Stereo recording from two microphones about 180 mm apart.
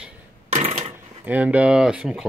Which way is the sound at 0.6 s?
35° right (ahead or behind).